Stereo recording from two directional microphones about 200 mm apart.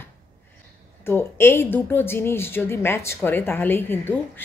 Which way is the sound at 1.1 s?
10° left (ahead or behind).